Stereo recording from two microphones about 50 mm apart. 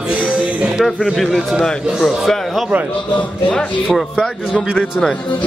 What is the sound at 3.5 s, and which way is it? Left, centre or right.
Speech, left.